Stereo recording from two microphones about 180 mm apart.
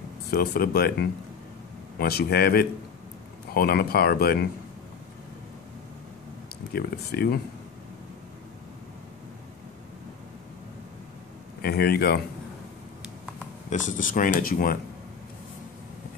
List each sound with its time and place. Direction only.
0.3 s speech: 55° left (ahead or behind)
2.0 s speech: 60° left (ahead or behind)
6.7 s speech: 60° left (ahead or behind)
11.6 s speech: 60° left (ahead or behind)
13.7 s speech: 45° left (ahead or behind)